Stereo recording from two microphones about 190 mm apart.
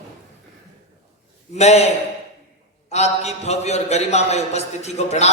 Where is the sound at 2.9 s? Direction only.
35° left (ahead or behind).